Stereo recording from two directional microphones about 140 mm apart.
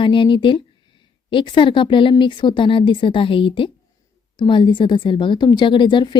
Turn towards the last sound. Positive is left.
turn(degrees=35)  # may be behind; listen again after turning